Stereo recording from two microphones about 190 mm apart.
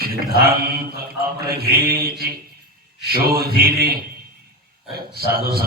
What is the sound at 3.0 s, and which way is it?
Speech, 50° right (ahead or behind).